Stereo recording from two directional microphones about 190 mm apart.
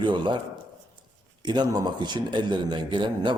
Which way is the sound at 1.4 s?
20° right (ahead or behind).